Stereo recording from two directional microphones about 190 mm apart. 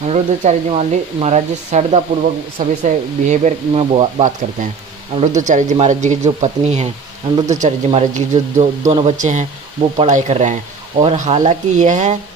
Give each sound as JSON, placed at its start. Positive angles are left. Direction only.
{"t": 0.1, "sound": "speech", "side_deg": -35}